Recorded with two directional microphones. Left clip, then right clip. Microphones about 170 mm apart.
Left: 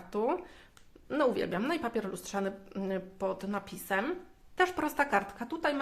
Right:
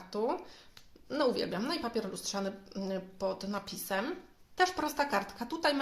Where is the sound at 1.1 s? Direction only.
15° left (ahead or behind).